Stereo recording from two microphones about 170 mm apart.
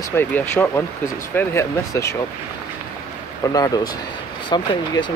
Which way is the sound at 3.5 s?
20° left (ahead or behind).